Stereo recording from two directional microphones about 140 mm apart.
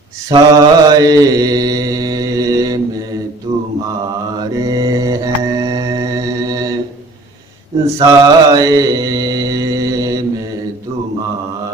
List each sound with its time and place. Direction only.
0.3 s mantra: 25° right (ahead or behind)
4.4 s mantra: 25° right (ahead or behind)
8.0 s mantra: 25° right (ahead or behind)